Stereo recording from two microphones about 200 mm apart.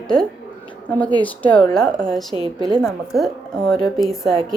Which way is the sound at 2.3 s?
20° left (ahead or behind).